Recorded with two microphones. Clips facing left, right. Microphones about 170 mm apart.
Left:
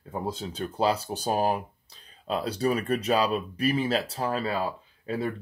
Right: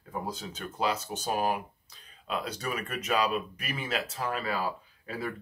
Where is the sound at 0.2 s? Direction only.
30° left (ahead or behind).